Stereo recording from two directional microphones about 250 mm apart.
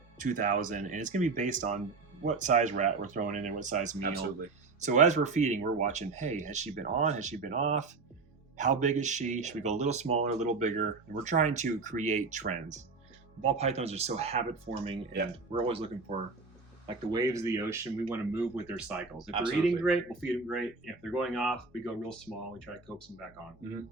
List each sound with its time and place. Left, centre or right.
0.2 s speech: right; by 19.3 s centre
19.3 s speech: centre
19.6 s speech: centre